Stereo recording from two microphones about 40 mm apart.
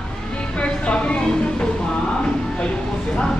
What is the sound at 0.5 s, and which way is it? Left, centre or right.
Music, left.